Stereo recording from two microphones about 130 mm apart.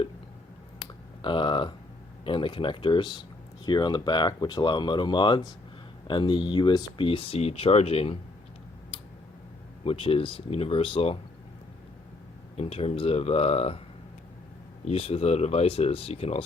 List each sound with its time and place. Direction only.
1.2 s speech: 40° left (ahead or behind)
9.8 s speech: 45° left (ahead or behind)
12.5 s speech: 50° left (ahead or behind)
14.8 s speech: 50° left (ahead or behind)